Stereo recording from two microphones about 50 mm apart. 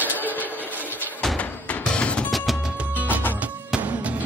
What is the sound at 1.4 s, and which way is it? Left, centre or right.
Music, left.